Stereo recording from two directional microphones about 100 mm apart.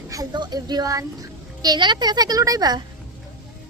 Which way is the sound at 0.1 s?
40° right (ahead or behind).